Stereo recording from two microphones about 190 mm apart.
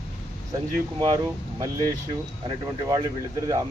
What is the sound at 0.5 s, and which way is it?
Speech, 20° right (ahead or behind).